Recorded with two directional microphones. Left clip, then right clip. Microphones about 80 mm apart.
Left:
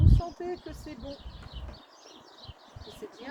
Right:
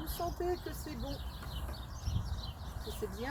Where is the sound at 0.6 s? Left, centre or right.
Left.